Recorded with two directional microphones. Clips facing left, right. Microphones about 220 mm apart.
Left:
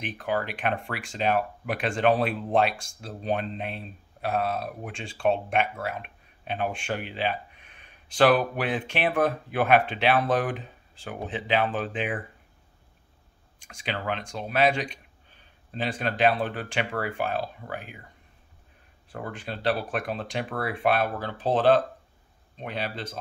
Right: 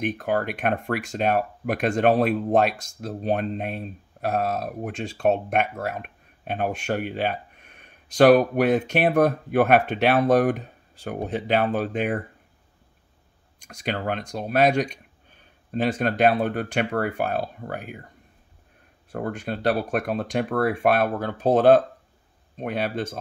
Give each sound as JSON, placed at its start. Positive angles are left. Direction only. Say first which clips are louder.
{"t": 0.0, "sound": "speech", "louder": "right 5 dB", "side_deg": -45}
{"t": 13.7, "sound": "speech", "louder": "right 4 dB", "side_deg": -40}
{"t": 19.1, "sound": "speech", "louder": "right 7 dB", "side_deg": -50}